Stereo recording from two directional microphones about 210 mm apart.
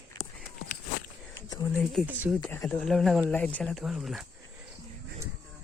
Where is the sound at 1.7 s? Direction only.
Centre (ahead or behind).